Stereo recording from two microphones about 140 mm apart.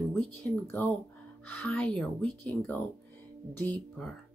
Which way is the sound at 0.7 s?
10° left (ahead or behind).